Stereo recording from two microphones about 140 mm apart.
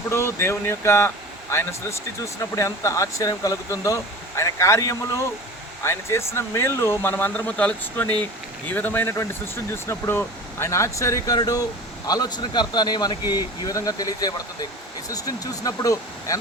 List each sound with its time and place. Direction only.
0.1 s speech: 20° left (ahead or behind)